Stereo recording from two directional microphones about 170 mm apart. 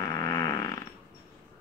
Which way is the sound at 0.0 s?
20° left (ahead or behind).